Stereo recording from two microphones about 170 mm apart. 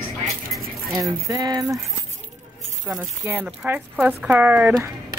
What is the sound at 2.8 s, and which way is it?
Speech, 10° right (ahead or behind).